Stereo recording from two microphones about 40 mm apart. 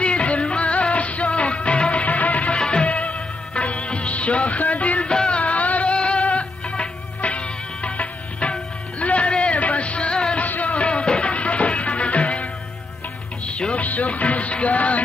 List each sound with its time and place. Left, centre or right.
0.0 s music: left
2.5 s music of bollywood: left
5.1 s music: left
5.4 s music: left
10.4 s music: left
13.5 s music: left
13.7 s music: left